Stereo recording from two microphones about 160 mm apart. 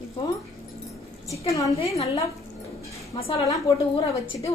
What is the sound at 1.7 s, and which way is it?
Speech, 35° left (ahead or behind).